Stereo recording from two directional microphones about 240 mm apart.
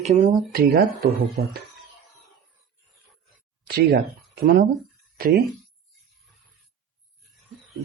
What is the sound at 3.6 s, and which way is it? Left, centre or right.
Speech, right.